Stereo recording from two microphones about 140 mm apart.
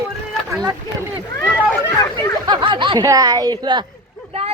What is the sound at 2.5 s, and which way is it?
Speech, 35° right (ahead or behind).